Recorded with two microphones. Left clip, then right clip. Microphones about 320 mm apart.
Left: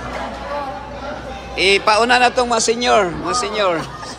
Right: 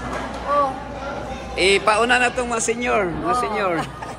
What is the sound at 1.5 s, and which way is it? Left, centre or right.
A man's voice, centre.